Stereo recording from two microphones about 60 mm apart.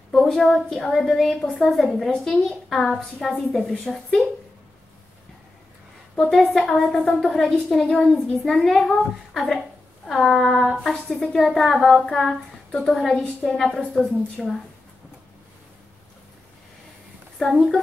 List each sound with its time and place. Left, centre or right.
0.1 s a woman's voice: centre
6.3 s a woman's voice: centre
6.6 s a woman's voice: centre
13.2 s a woman's voice: centre
13.6 s a woman's voice: centre
17.4 s a woman's voice: centre